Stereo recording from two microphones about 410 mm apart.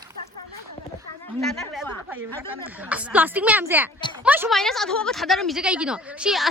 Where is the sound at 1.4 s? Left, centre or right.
Centre.